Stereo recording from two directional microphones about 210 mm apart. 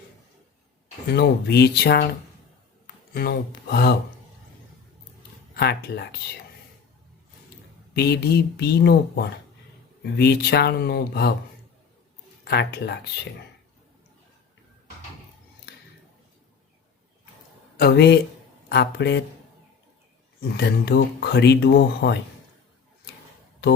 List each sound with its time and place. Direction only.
1.0 s speech: 50° left (ahead or behind)
5.5 s speech: 50° left (ahead or behind)
7.9 s speech: 50° left (ahead or behind)
12.5 s speech: 50° left (ahead or behind)
17.7 s speech: 50° left (ahead or behind)
20.4 s speech: 50° left (ahead or behind)